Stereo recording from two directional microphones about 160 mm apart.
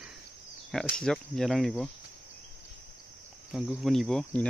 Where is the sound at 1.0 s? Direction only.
Centre (ahead or behind).